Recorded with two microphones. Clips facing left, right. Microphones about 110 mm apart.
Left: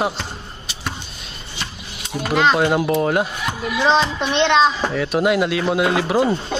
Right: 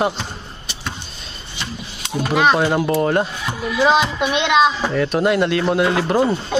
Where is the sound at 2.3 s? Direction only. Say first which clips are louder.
Right 1 dB; 10° right (ahead or behind).